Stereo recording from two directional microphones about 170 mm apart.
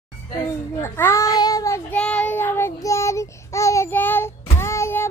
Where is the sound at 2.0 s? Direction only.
5° left (ahead or behind).